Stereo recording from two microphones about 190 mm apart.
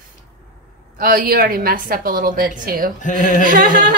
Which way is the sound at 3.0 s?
40° left (ahead or behind).